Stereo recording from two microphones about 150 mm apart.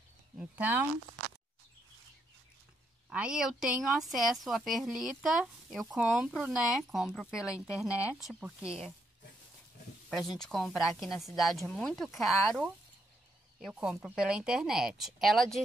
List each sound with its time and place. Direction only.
0.4 s speech: 10° right (ahead or behind)
3.1 s speech: 5° right (ahead or behind)
10.0 s speech: centre (ahead or behind)